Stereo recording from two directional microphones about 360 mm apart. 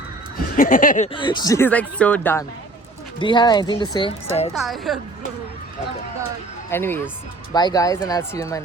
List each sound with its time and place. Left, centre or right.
0.5 s speech: left
4.5 s a woman's voice: centre
6.7 s speech: centre